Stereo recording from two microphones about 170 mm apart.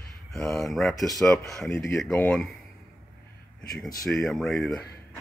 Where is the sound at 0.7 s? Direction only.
Centre (ahead or behind).